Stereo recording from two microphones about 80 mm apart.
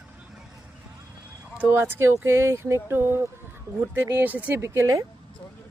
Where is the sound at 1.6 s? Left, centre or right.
Right.